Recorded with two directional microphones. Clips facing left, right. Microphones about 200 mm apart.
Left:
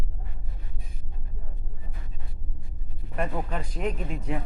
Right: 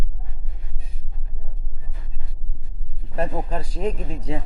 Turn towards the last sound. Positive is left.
turn(degrees=-30)  # may be behind; listen again after turning